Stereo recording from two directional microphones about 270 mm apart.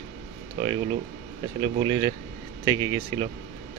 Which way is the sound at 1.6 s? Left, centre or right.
Centre.